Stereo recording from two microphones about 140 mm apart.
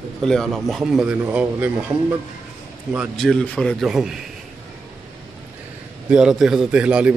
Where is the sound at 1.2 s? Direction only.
15° right (ahead or behind).